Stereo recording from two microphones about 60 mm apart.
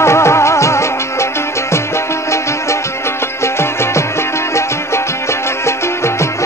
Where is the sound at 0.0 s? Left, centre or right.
Left.